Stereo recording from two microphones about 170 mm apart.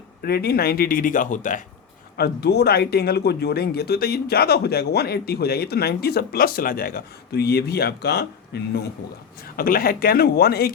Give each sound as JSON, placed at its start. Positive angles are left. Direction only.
{"t": 0.2, "sound": "a man's voice", "side_deg": 65}
{"t": 2.1, "sound": "speech", "side_deg": 70}
{"t": 9.6, "sound": "a man's voice", "side_deg": 60}